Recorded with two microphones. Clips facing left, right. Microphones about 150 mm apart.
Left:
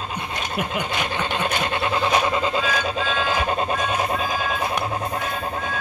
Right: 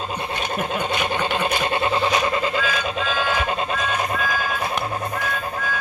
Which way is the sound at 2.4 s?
30° left (ahead or behind).